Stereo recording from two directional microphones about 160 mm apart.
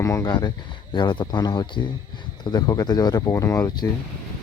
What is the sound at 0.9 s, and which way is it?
Speech, 30° left (ahead or behind).